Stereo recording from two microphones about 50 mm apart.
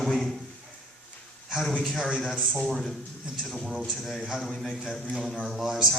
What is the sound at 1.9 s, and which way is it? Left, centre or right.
Speech, centre.